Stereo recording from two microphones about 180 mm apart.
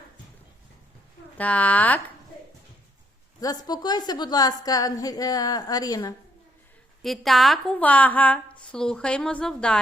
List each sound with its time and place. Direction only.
1.4 s speech: 10° left (ahead or behind)
3.4 s a woman's voice: 20° left (ahead or behind)
7.0 s a woman's voice: centre (ahead or behind)